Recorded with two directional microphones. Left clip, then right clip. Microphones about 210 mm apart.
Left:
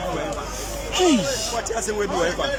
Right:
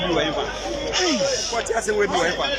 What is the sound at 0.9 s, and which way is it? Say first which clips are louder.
Speech: left 2 dB; 15° left (ahead or behind).